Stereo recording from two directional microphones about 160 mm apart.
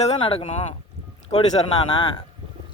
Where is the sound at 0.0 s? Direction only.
40° left (ahead or behind).